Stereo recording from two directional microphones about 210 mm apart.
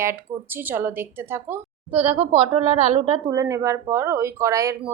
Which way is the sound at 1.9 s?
25° right (ahead or behind).